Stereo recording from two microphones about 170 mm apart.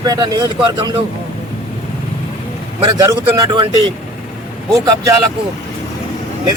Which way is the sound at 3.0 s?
20° right (ahead or behind).